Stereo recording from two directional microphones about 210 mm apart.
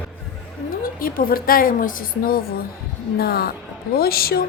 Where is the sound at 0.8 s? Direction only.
45° left (ahead or behind).